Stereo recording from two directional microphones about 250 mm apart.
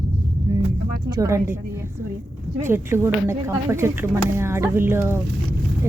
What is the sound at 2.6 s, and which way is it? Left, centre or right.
A woman's voice, centre.